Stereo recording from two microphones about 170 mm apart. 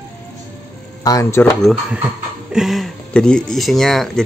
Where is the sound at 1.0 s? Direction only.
20° left (ahead or behind).